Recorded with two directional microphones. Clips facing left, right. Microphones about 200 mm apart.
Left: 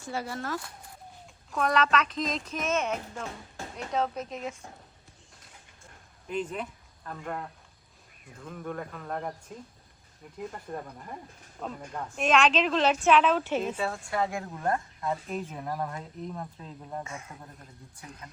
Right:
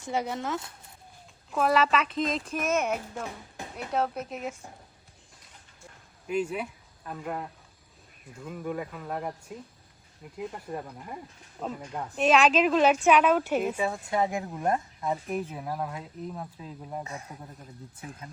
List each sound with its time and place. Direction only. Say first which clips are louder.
0.0 s speech: right 4 dB; 20° right (ahead or behind)
1.5 s speech: right 2 dB; 5° right (ahead or behind)
6.2 s speech: right 3 dB; 10° right (ahead or behind)
17.0 s speech: right 1 dB; 35° right (ahead or behind)